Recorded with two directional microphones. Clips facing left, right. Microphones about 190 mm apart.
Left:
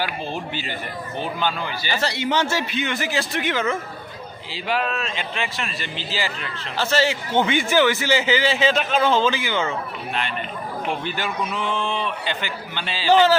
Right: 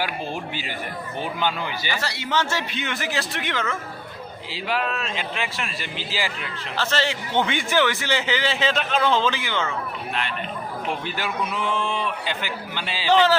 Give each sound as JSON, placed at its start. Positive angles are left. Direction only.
{"t": 1.2, "sound": "a man's voice", "side_deg": -15}
{"t": 1.9, "sound": "a man's voice", "side_deg": 25}
{"t": 6.7, "sound": "a man's voice", "side_deg": 5}
{"t": 10.8, "sound": "a man's voice", "side_deg": -5}
{"t": 13.1, "sound": "a man's voice", "side_deg": 5}